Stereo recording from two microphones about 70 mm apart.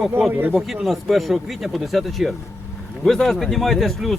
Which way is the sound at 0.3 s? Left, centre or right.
Right.